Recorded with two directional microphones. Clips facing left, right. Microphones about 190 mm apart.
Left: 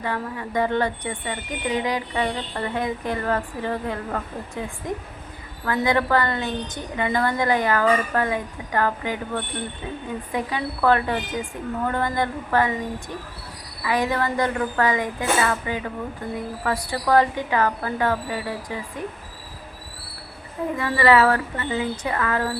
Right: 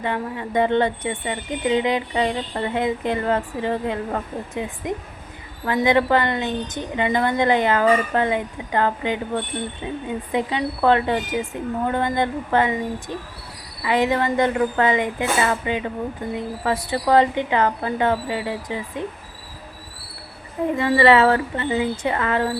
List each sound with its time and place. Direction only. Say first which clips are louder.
0.0 s speech: right 2 dB; 20° right (ahead or behind)
20.7 s speech: right 3 dB; 25° right (ahead or behind)